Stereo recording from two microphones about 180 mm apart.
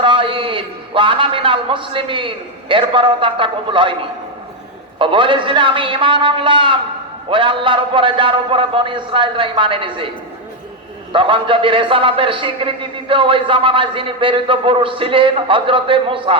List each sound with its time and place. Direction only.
0.0 s a man's voice: 30° right (ahead or behind)
4.9 s a man's voice: 30° right (ahead or behind)
11.1 s a man's voice: 30° right (ahead or behind)